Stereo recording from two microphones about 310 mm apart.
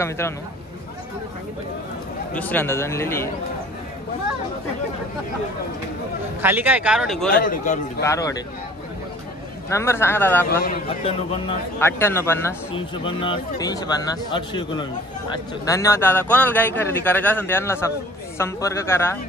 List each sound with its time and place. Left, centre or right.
0.2 s a man's voice: centre
2.3 s a man's voice: centre
6.4 s speech: centre
7.2 s a man's voice: left
8.0 s a man's voice: centre
9.7 s a man's voice: centre
10.6 s a man's voice: left